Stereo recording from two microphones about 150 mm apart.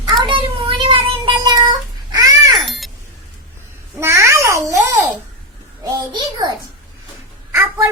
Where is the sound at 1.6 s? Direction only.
25° right (ahead or behind).